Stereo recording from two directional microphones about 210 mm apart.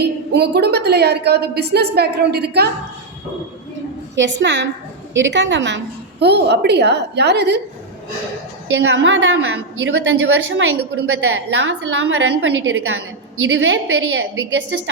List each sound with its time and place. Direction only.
0.0 s a woman's voice: 50° right (ahead or behind)
4.1 s a woman's voice: 60° right (ahead or behind)
8.7 s a woman's voice: 60° right (ahead or behind)